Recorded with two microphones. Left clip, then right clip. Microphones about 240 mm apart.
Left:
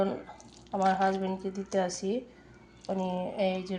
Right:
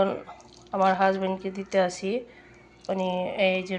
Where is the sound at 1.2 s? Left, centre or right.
Centre.